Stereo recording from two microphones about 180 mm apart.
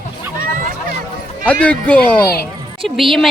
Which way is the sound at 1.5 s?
5° left (ahead or behind).